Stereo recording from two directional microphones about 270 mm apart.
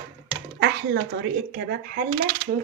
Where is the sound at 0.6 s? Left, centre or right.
Right.